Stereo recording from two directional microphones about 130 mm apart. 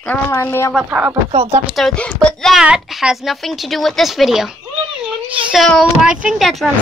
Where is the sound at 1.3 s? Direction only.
55° right (ahead or behind).